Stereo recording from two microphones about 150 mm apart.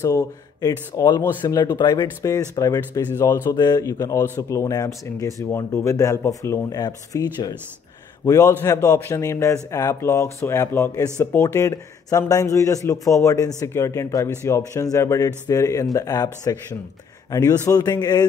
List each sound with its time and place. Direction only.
0.0 s speech: 20° left (ahead or behind)